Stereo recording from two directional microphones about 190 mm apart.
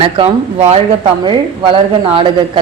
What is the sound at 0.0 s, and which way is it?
Speech, 30° right (ahead or behind).